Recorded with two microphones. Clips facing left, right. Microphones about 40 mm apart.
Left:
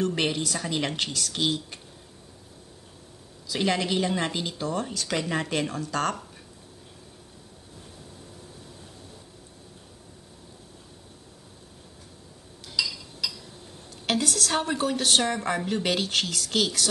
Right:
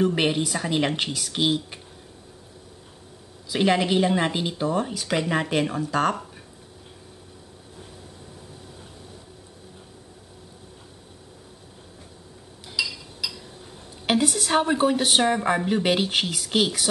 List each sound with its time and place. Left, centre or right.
0.0 s speech: centre
3.4 s speech: centre
12.6 s a sound: centre
14.0 s speech: centre